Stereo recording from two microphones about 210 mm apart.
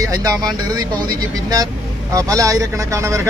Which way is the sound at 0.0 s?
15° right (ahead or behind).